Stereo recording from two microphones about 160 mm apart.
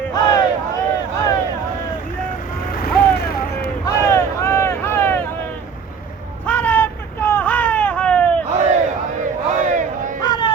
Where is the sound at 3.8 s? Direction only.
20° left (ahead or behind).